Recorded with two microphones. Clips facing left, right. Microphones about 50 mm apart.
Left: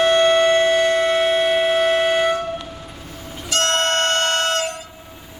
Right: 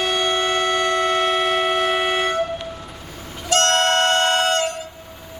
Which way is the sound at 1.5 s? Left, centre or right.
Centre.